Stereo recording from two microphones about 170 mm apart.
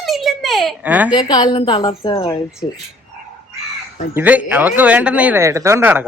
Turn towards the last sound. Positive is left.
turn(degrees=-10)  # may be behind; listen again after turning